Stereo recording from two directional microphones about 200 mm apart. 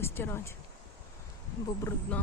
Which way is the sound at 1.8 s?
10° left (ahead or behind).